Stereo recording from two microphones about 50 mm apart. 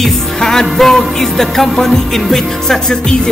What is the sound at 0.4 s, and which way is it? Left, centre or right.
Music, centre.